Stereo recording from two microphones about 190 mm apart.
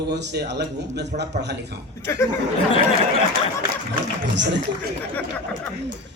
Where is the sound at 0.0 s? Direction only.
65° right (ahead or behind).